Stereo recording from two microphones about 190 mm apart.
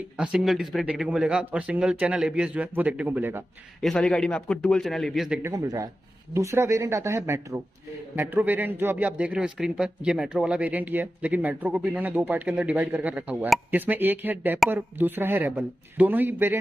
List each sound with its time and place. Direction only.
0.2 s speech: 5° right (ahead or behind)
3.8 s a man's voice: 5° left (ahead or behind)
5.4 s a man's voice: 20° right (ahead or behind)